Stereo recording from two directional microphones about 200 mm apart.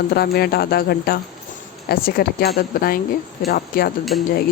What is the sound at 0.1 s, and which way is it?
Speech, 50° left (ahead or behind).